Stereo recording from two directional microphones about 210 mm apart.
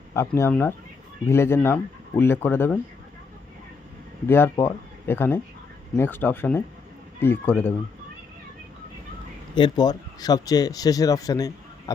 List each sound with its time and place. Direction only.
0.1 s speech: 10° left (ahead or behind)
4.3 s speech: 10° left (ahead or behind)
9.6 s speech: 20° left (ahead or behind)